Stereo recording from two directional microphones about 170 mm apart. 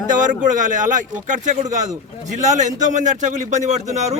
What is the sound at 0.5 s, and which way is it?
A man's voice, 50° right (ahead or behind).